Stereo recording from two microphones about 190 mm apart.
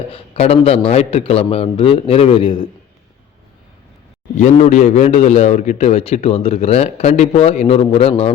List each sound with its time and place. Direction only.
0.1 s a man's voice: 30° left (ahead or behind)
4.4 s a man's voice: 35° left (ahead or behind)